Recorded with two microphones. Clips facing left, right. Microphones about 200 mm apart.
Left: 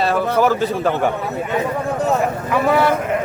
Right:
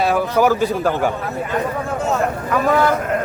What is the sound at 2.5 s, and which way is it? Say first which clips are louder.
Speech: even; 5° left (ahead or behind).